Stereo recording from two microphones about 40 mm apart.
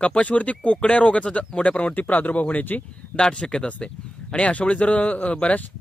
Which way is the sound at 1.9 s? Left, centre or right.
Left.